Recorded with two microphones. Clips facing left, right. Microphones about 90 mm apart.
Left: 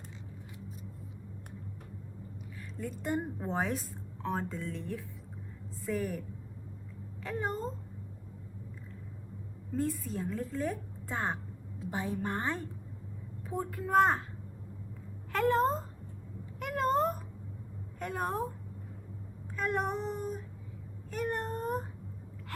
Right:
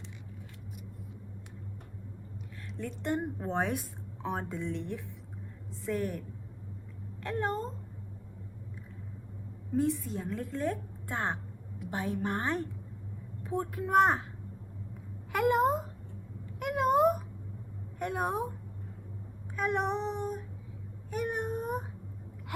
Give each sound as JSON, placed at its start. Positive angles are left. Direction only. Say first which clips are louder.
{"t": 2.7, "sound": "a woman's voice", "louder": "right 1 dB", "side_deg": 5}
{"t": 3.7, "sound": "a woman's voice", "louder": "right 1 dB", "side_deg": -10}
{"t": 9.7, "sound": "a woman's voice", "louder": "right 3 dB", "side_deg": 0}
{"t": 11.8, "sound": "a woman's voice", "louder": "even", "side_deg": 30}
{"t": 12.2, "sound": "a woman's voice", "louder": "right 3 dB", "side_deg": -15}
{"t": 13.4, "sound": "a woman's voice", "louder": "right 3 dB", "side_deg": 0}
{"t": 15.3, "sound": "a sound", "louder": "right 1 dB", "side_deg": -10}
{"t": 16.6, "sound": "cat", "louder": "right 3 dB", "side_deg": -5}
{"t": 18.0, "sound": "a woman's voice", "louder": "right 2 dB", "side_deg": -5}
{"t": 19.5, "sound": "a woman's voice", "louder": "right 2 dB", "side_deg": 0}
{"t": 21.1, "sound": "a sound", "louder": "right 1 dB", "side_deg": -5}